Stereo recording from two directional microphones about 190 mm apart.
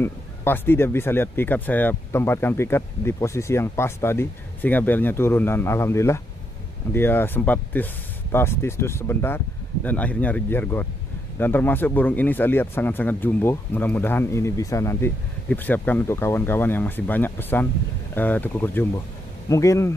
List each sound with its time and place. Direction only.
0.0 s speech: 10° left (ahead or behind)